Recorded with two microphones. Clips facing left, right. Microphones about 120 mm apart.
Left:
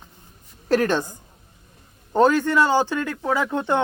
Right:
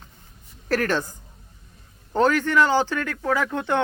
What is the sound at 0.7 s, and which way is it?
Speech, 20° left (ahead or behind).